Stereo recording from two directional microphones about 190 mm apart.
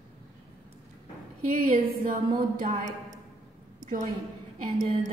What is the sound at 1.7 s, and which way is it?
A woman's voice, 45° right (ahead or behind).